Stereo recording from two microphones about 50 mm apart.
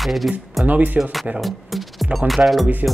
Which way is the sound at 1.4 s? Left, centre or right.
Centre.